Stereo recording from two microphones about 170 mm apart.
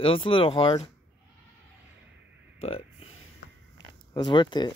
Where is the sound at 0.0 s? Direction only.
30° left (ahead or behind).